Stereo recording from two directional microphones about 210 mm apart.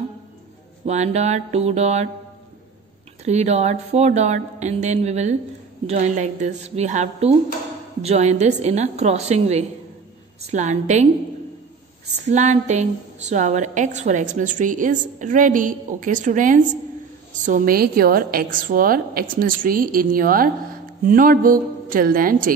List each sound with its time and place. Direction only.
0.8 s a woman's voice: 30° right (ahead or behind)
3.3 s a woman's voice: 30° right (ahead or behind)
12.3 s a woman's voice: 35° right (ahead or behind)